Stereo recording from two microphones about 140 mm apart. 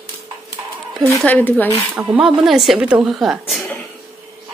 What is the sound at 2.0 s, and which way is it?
A woman's voice, 5° right (ahead or behind).